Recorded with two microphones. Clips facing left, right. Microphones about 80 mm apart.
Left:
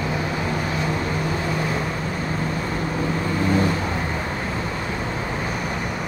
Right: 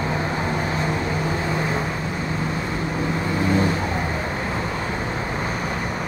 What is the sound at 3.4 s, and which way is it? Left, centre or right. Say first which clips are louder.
Vehicle: even; right.